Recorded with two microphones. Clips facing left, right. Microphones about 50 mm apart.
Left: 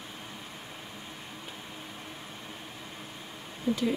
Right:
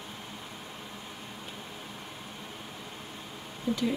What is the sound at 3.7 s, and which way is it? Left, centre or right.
Speech, left.